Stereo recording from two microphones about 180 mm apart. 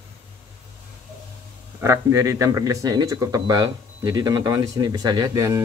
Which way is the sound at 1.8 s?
15° right (ahead or behind).